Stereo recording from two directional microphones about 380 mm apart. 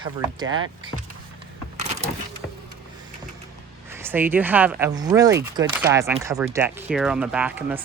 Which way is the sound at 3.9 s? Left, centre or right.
Centre.